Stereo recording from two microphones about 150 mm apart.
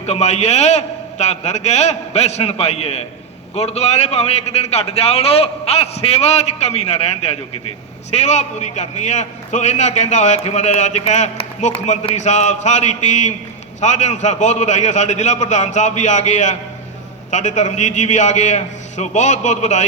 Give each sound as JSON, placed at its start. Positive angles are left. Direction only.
{"t": 0.0, "sound": "a man's voice", "side_deg": 45}